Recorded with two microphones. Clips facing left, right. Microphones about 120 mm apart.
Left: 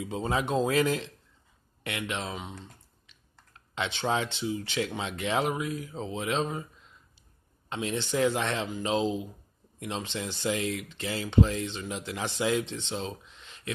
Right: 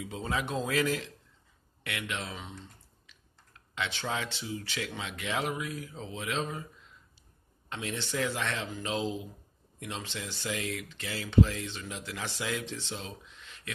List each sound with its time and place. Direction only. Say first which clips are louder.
0.0 s speech: left 4 dB; 30° left (ahead or behind)
3.7 s speech: left 5 dB; 25° left (ahead or behind)
7.7 s speech: left 5 dB; 25° left (ahead or behind)